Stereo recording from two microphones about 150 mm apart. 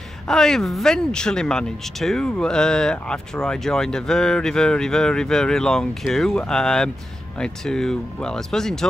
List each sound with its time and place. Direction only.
0.3 s speech: 5° left (ahead or behind)